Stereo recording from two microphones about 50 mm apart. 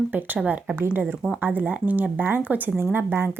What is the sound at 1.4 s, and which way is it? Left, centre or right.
Speech, right.